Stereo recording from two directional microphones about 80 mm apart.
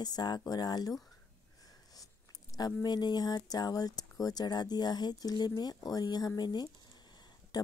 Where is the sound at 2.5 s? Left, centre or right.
Left.